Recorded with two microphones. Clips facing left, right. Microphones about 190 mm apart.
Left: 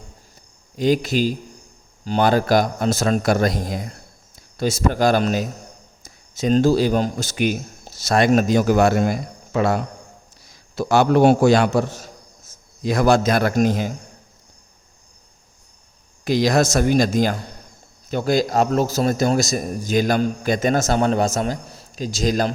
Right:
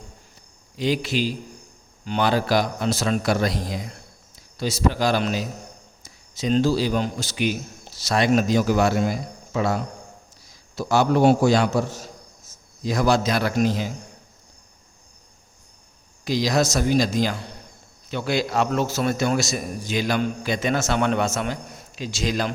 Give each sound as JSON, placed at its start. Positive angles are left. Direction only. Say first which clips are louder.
{"t": 0.8, "sound": "a man's voice", "louder": "left 5 dB", "side_deg": 45}
{"t": 16.2, "sound": "a man's voice", "louder": "left 4 dB", "side_deg": 55}